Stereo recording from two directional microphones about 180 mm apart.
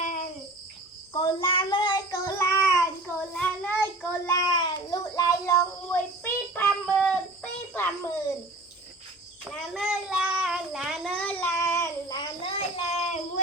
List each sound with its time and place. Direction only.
0.0 s cricket: 45° left (ahead or behind)
1.1 s child singing: 25° left (ahead or behind); by 4.4 s 10° left (ahead or behind)
4.4 s child singing: 20° left (ahead or behind)
6.5 s a sound: 10° left (ahead or behind)
9.4 s child singing: centre (ahead or behind); by 13.4 s 35° left (ahead or behind)